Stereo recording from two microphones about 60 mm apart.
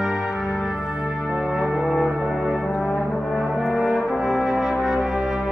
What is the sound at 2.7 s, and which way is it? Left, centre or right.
Brass instrument, left.